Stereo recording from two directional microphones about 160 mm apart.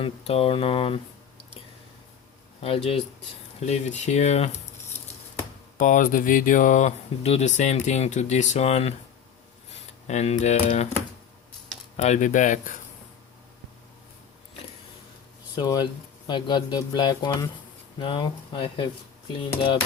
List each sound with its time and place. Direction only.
0.0 s speech: 40° left (ahead or behind)
2.6 s speech: 40° left (ahead or behind)
5.7 s speech: 55° left (ahead or behind)
10.1 s speech: 45° left (ahead or behind)
11.9 s speech: 45° left (ahead or behind)
15.5 s speech: 25° left (ahead or behind)